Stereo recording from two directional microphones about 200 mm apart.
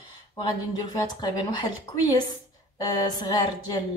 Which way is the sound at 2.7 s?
20° left (ahead or behind).